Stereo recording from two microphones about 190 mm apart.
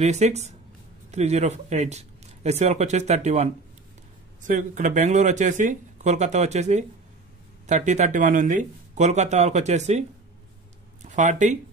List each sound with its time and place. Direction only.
0.0 s speech: 35° right (ahead or behind)
11.1 s speech: 40° right (ahead or behind)